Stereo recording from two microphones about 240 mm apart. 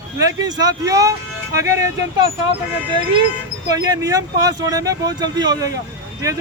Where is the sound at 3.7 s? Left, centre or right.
Centre.